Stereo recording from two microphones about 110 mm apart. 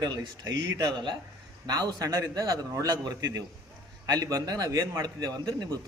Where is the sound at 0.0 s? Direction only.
35° right (ahead or behind).